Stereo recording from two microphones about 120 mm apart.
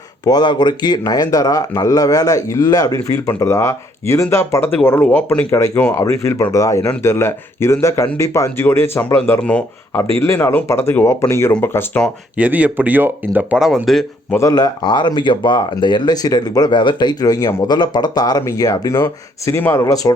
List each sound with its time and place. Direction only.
0.3 s speech: 35° left (ahead or behind); by 9.4 s 20° left (ahead or behind)
9.4 s speech: 10° left (ahead or behind)
10.2 s speech: 25° left (ahead or behind)
12.4 s speech: 10° right (ahead or behind)
13.6 s a man's voice: 5° right (ahead or behind)
14.3 s speech: 30° left (ahead or behind)